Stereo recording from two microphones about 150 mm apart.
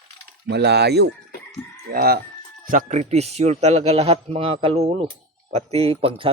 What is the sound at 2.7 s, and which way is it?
A man's voice, 55° right (ahead or behind).